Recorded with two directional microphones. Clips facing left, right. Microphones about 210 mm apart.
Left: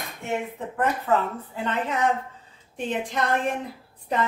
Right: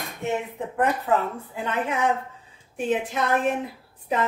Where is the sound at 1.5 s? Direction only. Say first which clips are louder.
Even; 10° right (ahead or behind).